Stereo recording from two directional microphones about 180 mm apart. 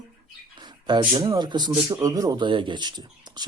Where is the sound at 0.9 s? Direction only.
25° right (ahead or behind).